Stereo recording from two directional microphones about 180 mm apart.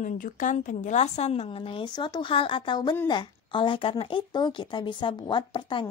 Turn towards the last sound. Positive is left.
turn(degrees=25)  # may be behind; listen again after turning